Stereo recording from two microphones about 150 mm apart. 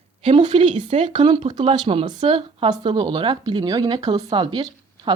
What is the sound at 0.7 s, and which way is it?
Speech, 55° right (ahead or behind).